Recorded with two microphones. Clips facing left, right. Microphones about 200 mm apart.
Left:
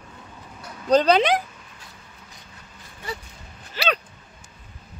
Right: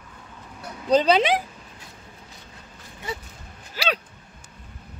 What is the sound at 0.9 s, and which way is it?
Speech, 5° right (ahead or behind).